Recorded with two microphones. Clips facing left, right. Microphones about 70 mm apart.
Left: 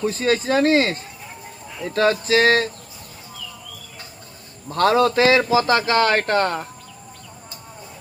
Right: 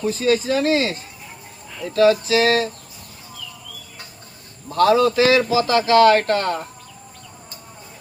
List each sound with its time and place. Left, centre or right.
0.0 s a man's voice: left
4.7 s a man's voice: left